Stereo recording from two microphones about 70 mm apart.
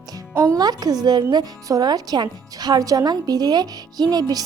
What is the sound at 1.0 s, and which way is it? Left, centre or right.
Speech, right.